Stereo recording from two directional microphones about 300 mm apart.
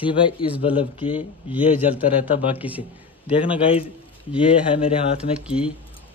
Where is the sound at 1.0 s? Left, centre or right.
Centre.